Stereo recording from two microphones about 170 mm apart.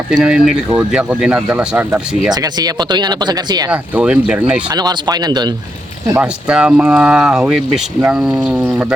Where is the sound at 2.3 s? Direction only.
25° right (ahead or behind).